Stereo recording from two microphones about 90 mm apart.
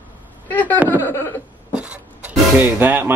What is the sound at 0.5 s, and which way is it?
Speech, 20° left (ahead or behind).